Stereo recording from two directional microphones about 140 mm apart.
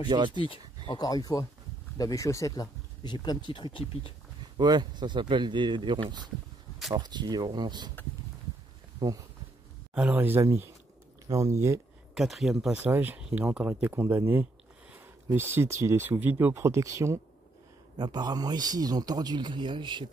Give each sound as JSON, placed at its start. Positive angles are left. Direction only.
{"t": 0.1, "sound": "speech", "side_deg": -35}
{"t": 0.4, "sound": "speech", "side_deg": 35}
{"t": 4.6, "sound": "speech", "side_deg": -30}
{"t": 9.9, "sound": "speech", "side_deg": -10}
{"t": 12.1, "sound": "a man's voice", "side_deg": 0}